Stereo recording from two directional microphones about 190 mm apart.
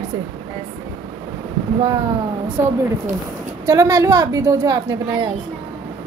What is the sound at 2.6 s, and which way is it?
Speech, 15° right (ahead or behind).